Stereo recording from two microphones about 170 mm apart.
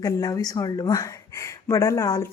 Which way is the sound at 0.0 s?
20° left (ahead or behind).